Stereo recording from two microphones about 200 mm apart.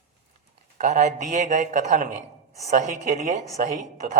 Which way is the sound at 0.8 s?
35° right (ahead or behind).